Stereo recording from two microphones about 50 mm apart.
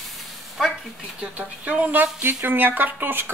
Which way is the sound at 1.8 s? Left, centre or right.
Right.